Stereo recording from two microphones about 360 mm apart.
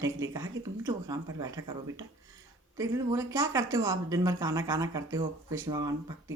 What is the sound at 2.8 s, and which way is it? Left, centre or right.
Speech, centre.